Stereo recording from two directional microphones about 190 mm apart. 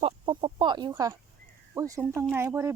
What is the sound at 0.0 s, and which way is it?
Chicken, 25° right (ahead or behind).